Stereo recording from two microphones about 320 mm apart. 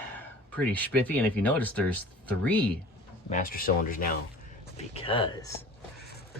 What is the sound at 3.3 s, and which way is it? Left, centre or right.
Speech, left.